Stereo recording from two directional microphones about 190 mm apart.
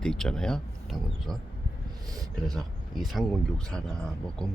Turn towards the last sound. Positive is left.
turn(degrees=5)  # may be behind; listen again after turning